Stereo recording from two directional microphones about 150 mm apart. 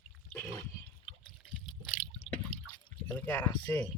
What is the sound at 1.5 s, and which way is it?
Water, 35° left (ahead or behind).